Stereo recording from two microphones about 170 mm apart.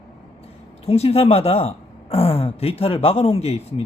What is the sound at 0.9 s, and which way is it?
Speech, 35° left (ahead or behind).